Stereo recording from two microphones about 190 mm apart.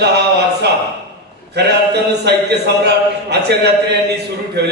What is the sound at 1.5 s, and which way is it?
A man's voice, 60° right (ahead or behind).